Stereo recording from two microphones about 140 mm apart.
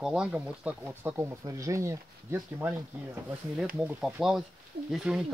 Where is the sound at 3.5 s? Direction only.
5° right (ahead or behind).